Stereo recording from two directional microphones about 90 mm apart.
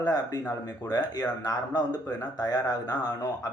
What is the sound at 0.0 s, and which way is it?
Speech, 45° left (ahead or behind).